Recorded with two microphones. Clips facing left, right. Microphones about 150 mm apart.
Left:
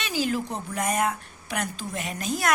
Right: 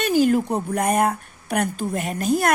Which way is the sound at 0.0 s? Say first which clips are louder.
Right 9 dB; 50° right (ahead or behind).